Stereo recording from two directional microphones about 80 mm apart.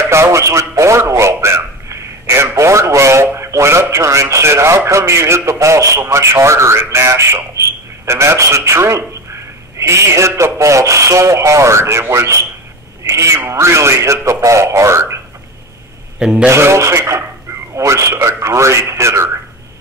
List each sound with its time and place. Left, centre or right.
0.1 s a man's voice: right
16.2 s a man's voice: centre
16.4 s speech: right